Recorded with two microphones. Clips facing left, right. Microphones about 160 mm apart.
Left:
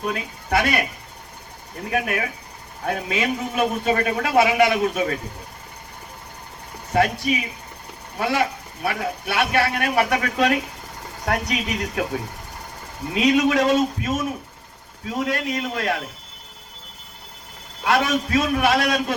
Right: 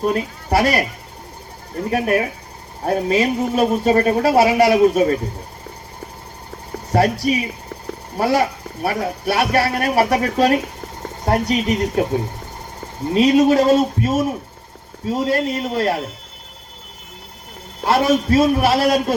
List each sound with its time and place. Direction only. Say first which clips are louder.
0.0 s speech: right 7 dB; 35° right (ahead or behind)
1.9 s speech: right 6 dB; 35° right (ahead or behind)
6.9 s speech: right 4 dB; 35° right (ahead or behind)
13.1 s speech: right 5 dB; 35° right (ahead or behind)
17.8 s speech: right 5 dB; 35° right (ahead or behind)